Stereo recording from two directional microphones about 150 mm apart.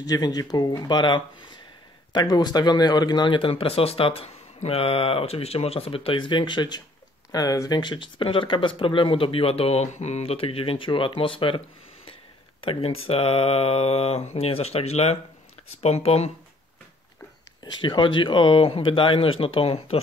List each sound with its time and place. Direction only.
0.0 s speech: 25° left (ahead or behind); by 16.3 s 45° left (ahead or behind)
17.6 s speech: 30° left (ahead or behind)